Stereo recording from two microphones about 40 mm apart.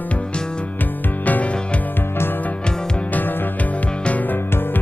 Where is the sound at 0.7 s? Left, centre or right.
Left.